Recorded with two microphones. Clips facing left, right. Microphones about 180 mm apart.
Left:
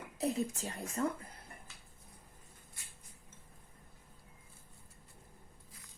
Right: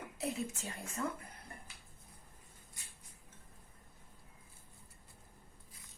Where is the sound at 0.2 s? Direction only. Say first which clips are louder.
Left 5 dB; 35° left (ahead or behind).